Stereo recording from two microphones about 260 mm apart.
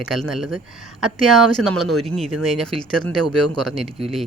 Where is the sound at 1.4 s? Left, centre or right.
Right.